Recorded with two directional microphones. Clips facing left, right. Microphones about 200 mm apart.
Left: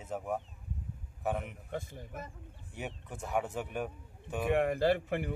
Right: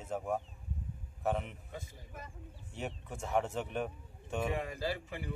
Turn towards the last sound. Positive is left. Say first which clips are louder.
# left 9 dB
turn(degrees=60)  # may be behind; listen again after turning